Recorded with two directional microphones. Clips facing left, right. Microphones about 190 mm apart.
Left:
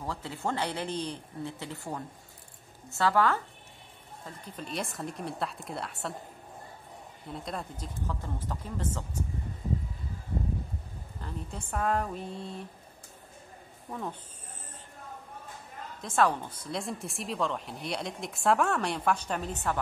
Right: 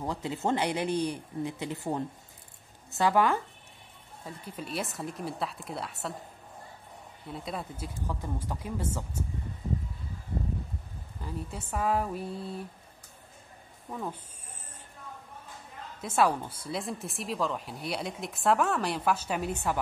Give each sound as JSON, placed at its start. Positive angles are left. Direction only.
{"t": 0.0, "sound": "speech", "side_deg": -20}
{"t": 4.3, "sound": "a woman's voice", "side_deg": -5}
{"t": 7.2, "sound": "speech", "side_deg": -5}
{"t": 11.1, "sound": "a woman's voice", "side_deg": -5}
{"t": 13.8, "sound": "speech", "side_deg": -5}
{"t": 16.0, "sound": "a woman's voice", "side_deg": -10}